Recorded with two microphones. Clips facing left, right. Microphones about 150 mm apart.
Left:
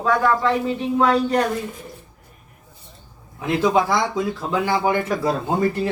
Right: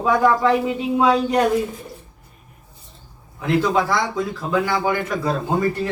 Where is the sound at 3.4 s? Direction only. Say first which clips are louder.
Even; 20° left (ahead or behind).